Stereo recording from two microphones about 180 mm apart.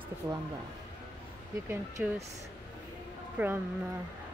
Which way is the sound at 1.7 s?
10° right (ahead or behind).